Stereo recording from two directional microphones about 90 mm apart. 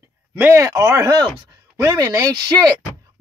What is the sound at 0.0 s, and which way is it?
Speech, 25° right (ahead or behind).